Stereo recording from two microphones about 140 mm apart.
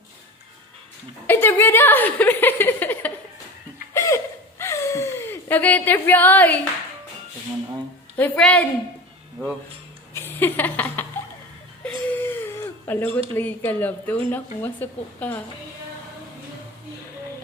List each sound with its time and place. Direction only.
1.3 s a woman's voice: 15° left (ahead or behind)
3.9 s a sound: 20° left (ahead or behind)
8.1 s speech: 10° left (ahead or behind)
10.2 s a sound: 15° left (ahead or behind)
11.9 s whimper: 10° left (ahead or behind)
12.9 s speech: 15° left (ahead or behind)